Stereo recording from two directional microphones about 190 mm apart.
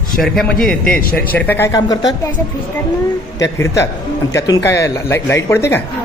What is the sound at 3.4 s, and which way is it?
Speech, 15° left (ahead or behind).